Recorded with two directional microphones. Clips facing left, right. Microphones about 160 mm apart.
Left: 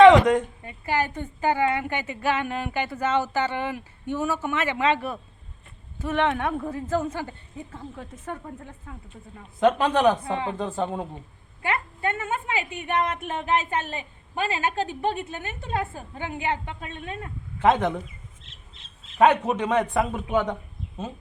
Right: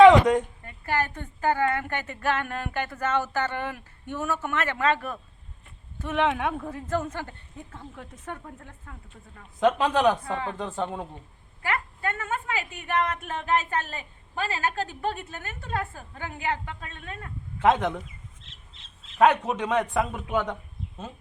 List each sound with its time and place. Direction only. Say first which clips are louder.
0.0 s a woman's voice: left 1 dB; 10° right (ahead or behind)
0.6 s a woman's voice: left 2 dB; 15° left (ahead or behind)
6.0 s speech: left 1 dB; centre (ahead or behind)
10.2 s a woman's voice: left 3 dB; 20° left (ahead or behind)
10.6 s a woman's voice: left 3 dB; 5° left (ahead or behind)
11.6 s a woman's voice: left 2 dB; 25° left (ahead or behind)
17.6 s speech: left 1 dB; centre (ahead or behind)
19.2 s speech: left 2 dB; 5° left (ahead or behind)